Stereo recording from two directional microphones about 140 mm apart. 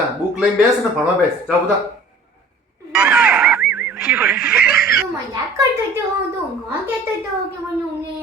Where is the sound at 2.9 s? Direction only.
5° right (ahead or behind).